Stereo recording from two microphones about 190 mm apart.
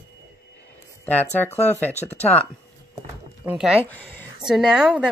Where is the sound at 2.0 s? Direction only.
35° left (ahead or behind).